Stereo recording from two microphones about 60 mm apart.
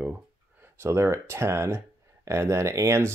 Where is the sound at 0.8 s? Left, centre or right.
Right.